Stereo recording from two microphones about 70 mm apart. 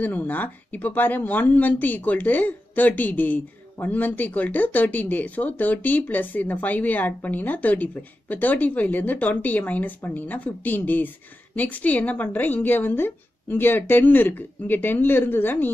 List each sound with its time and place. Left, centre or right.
0.0 s speech: left